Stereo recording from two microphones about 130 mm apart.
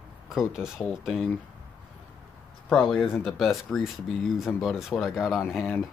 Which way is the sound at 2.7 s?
5° left (ahead or behind).